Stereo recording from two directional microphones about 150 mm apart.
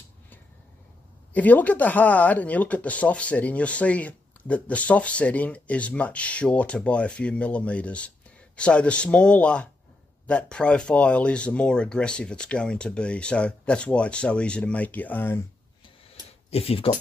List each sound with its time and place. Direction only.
1.3 s speech: 10° left (ahead or behind)
16.4 s speech: 40° left (ahead or behind)